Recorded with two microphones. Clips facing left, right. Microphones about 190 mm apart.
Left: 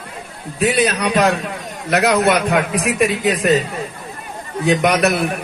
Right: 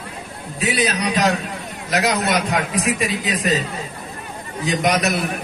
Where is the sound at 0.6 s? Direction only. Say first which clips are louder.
Left 4 dB; 60° left (ahead or behind).